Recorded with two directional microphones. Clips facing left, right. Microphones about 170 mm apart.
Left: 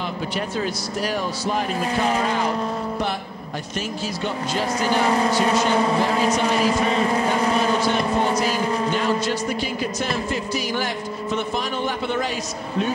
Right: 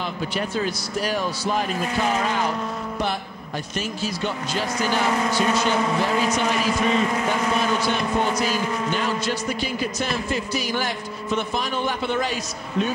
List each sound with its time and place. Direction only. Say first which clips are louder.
5.0 s speech: left 2 dB; 35° left (ahead or behind)